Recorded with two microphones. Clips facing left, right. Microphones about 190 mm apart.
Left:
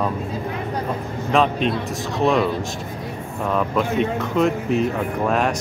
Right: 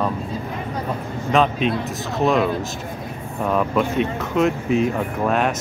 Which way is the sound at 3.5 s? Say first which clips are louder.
Right 1 dB; 5° right (ahead or behind).